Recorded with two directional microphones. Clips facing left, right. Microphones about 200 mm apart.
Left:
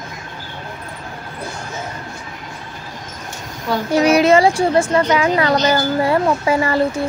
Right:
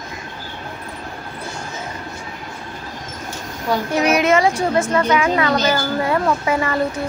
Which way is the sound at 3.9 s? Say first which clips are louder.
Left 5 dB; 30° left (ahead or behind).